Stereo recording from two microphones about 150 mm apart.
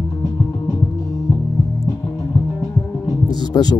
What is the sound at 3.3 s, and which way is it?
Music, 25° left (ahead or behind).